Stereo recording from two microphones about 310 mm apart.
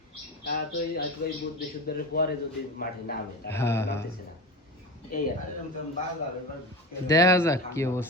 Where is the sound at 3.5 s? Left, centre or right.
Centre.